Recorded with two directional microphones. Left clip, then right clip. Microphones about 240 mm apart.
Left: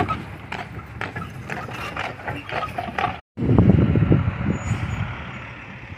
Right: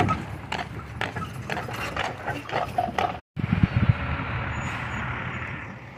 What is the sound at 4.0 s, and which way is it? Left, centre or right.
Vehicle, left.